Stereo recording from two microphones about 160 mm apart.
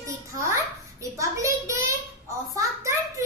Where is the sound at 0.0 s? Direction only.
20° right (ahead or behind).